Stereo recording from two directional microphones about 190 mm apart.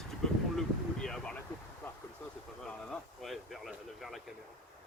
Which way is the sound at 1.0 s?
5° left (ahead or behind).